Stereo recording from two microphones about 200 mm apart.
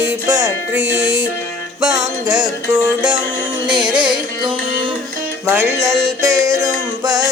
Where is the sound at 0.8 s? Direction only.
5° right (ahead or behind).